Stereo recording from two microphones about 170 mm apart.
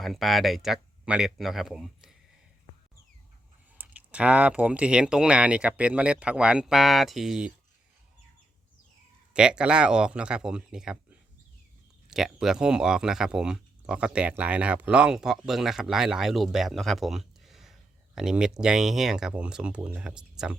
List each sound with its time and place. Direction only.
0.0 s speech: centre (ahead or behind)
3.8 s speech: 10° right (ahead or behind)
9.3 s speech: 5° right (ahead or behind)
12.1 s speech: centre (ahead or behind)